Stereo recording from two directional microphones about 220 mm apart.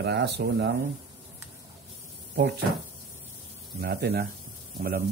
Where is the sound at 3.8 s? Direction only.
45° right (ahead or behind).